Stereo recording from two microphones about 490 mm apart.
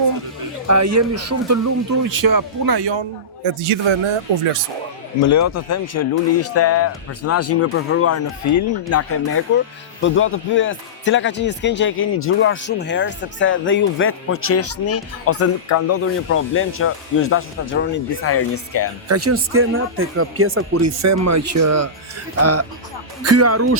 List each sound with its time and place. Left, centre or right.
0.7 s speech: right
3.4 s a man's voice: right
5.3 s speech: left
19.0 s speech: right
23.2 s speech: right